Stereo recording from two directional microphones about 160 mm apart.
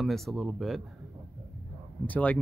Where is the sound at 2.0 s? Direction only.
10° left (ahead or behind).